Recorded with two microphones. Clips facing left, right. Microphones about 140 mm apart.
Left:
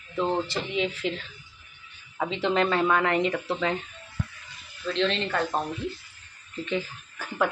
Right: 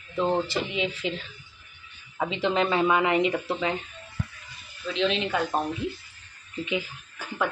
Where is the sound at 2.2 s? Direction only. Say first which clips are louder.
Even; 5° right (ahead or behind).